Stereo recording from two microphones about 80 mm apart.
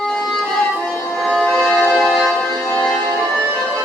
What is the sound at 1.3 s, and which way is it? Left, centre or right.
Music, centre.